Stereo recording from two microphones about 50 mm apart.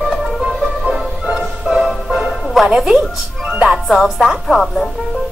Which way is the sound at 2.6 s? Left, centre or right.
Centre.